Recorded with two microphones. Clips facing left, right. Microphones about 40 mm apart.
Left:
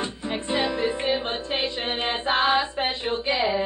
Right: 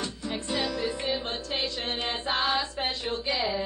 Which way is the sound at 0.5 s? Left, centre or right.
Left.